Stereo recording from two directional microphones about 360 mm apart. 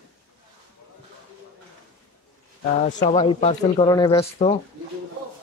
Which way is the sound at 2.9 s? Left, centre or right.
Centre.